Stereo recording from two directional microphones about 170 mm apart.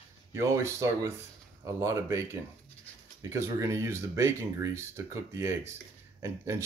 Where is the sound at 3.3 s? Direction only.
20° right (ahead or behind).